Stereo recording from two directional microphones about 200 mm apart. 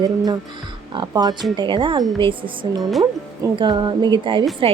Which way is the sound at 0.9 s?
20° right (ahead or behind).